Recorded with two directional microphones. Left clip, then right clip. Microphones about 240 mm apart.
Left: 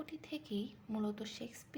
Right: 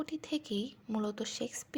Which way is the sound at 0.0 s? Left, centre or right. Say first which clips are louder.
Right 8 dB; right.